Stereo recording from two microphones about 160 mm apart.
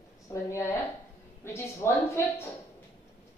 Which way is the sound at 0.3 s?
15° left (ahead or behind).